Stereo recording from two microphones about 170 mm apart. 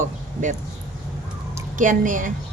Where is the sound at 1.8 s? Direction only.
50° right (ahead or behind).